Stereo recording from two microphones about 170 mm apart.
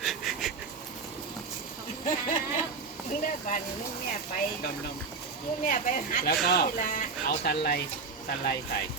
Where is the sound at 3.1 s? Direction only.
50° left (ahead or behind).